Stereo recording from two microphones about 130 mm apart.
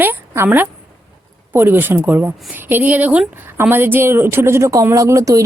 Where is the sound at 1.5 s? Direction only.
15° right (ahead or behind).